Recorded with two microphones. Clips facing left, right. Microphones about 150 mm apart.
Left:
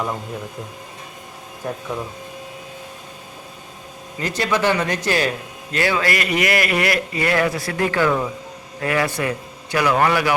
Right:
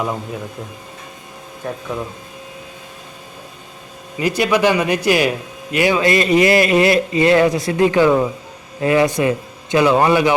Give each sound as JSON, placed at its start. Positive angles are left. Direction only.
{"t": 1.6, "sound": "speech", "side_deg": 0}
{"t": 4.2, "sound": "a man's voice", "side_deg": -10}